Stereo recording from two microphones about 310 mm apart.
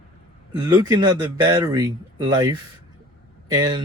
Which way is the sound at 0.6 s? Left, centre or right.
Centre.